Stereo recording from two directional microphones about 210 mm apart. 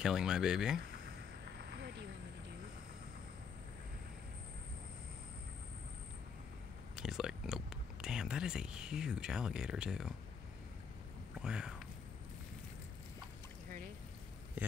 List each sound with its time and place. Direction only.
0.0 s speech: 5° right (ahead or behind)
1.4 s a sound: 50° right (ahead or behind)
7.0 s speech: centre (ahead or behind)
11.3 s speech: 5° right (ahead or behind)
14.6 s a man's voice: 10° right (ahead or behind)